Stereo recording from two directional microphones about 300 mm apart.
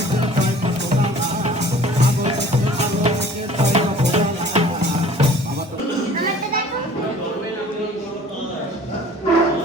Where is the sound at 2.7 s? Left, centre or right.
Right.